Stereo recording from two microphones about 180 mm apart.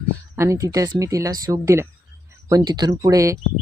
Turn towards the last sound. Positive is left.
turn(degrees=-20)  # may be behind; listen again after turning